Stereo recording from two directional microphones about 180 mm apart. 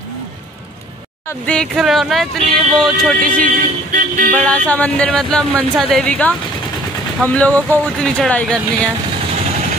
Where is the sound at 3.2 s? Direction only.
50° right (ahead or behind).